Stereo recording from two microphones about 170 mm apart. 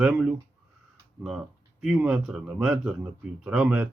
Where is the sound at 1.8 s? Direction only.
5° right (ahead or behind).